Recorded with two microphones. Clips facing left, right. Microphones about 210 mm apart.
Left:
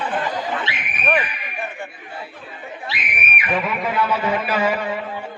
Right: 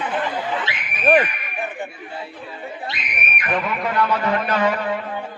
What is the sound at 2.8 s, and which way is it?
Speech, 5° left (ahead or behind).